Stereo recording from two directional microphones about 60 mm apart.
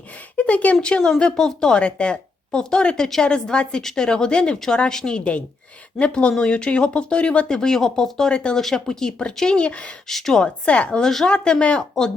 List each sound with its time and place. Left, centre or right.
0.3 s speech: left
10.1 s speech: centre
10.7 s speech: centre